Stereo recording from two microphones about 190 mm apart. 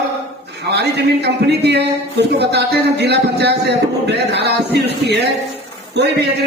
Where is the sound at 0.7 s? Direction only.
60° right (ahead or behind).